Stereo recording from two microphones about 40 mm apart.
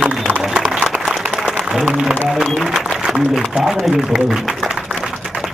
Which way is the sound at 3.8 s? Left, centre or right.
Centre.